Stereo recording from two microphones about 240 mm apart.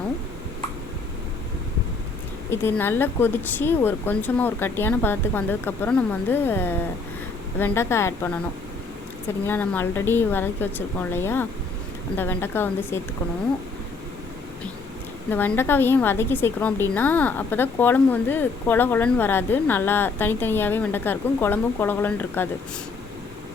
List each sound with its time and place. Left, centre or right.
2.5 s a woman's voice: centre
15.3 s a woman's voice: centre